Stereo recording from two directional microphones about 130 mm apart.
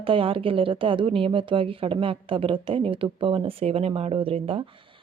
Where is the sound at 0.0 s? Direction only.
45° right (ahead or behind).